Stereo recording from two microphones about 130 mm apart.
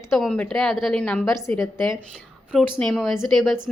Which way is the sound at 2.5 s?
5° left (ahead or behind).